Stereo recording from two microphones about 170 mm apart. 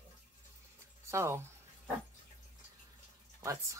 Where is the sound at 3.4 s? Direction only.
20° right (ahead or behind).